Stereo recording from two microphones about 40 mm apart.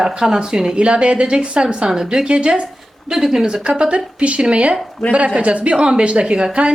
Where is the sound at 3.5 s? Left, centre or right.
Right.